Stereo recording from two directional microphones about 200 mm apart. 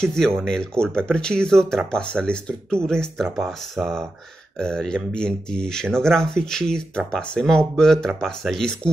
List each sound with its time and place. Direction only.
0.0 s speech: 5° left (ahead or behind)